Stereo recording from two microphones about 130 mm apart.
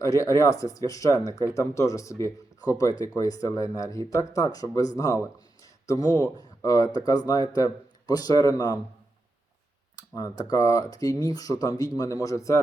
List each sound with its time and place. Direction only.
0.0 s speech: 25° left (ahead or behind)
9.9 s speech: 25° left (ahead or behind)